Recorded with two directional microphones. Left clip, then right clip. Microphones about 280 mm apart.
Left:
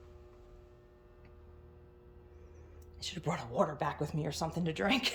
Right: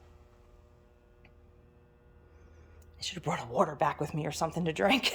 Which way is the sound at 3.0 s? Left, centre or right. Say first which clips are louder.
Right 3 dB; centre.